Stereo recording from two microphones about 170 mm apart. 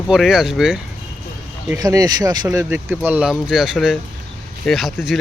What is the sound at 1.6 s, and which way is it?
Speech, 20° right (ahead or behind).